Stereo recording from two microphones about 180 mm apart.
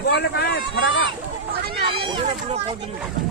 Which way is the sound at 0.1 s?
65° left (ahead or behind).